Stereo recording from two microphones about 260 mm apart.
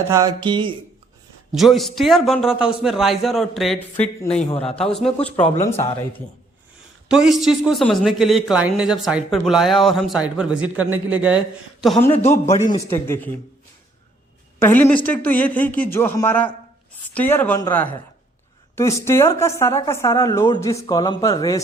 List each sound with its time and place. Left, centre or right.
0.1 s a sound: centre
1.5 s a man's voice: centre
4.4 s a man's voice: left
4.8 s a man's voice: centre
7.1 s a man's voice: centre
12.5 s a man's voice: left
12.9 s speech: centre
14.6 s speech: centre